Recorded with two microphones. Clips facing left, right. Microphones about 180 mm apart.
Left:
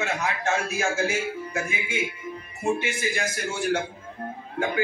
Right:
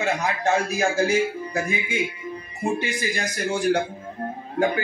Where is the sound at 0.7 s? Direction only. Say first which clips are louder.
Right 4 dB; 35° right (ahead or behind).